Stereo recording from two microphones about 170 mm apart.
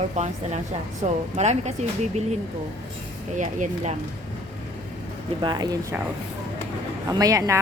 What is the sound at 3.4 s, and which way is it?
Speech, 45° right (ahead or behind).